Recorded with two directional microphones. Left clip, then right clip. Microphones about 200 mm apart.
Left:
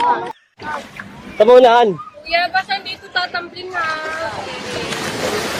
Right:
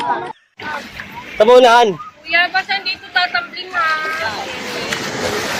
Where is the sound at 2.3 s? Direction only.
60° left (ahead or behind).